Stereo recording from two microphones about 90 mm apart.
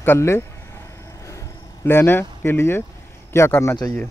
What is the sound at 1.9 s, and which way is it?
Speech, 25° left (ahead or behind).